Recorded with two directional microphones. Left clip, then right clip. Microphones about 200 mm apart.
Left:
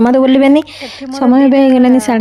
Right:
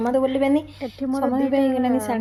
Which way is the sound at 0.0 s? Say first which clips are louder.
Left 11 dB; 45° left (ahead or behind).